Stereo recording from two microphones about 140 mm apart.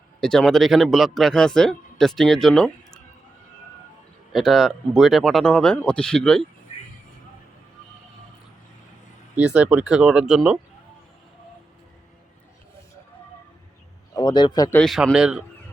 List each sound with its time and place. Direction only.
0.2 s a man's voice: 5° left (ahead or behind)
4.3 s a man's voice: centre (ahead or behind)
9.3 s speech: 10° right (ahead or behind)
14.2 s speech: 30° left (ahead or behind)
14.8 s a man's voice: centre (ahead or behind)